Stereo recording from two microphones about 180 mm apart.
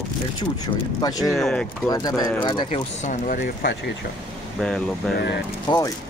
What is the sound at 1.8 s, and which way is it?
Speech, 20° left (ahead or behind).